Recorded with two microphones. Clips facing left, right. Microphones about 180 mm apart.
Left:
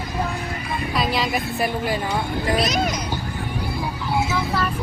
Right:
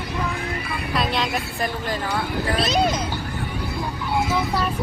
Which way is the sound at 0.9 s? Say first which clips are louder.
Left 1 dB; centre (ahead or behind).